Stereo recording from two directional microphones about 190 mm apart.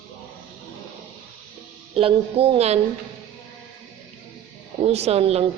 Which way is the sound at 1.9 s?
30° right (ahead or behind).